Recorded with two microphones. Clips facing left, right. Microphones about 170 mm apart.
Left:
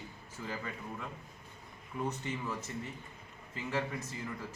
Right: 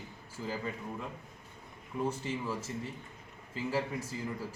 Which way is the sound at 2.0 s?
10° right (ahead or behind).